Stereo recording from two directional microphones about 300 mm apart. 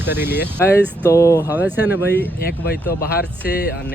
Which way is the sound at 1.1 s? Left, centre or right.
Centre.